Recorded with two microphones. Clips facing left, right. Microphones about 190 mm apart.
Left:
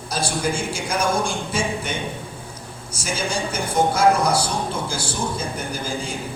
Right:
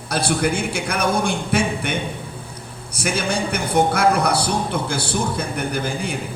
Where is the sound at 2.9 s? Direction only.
60° right (ahead or behind).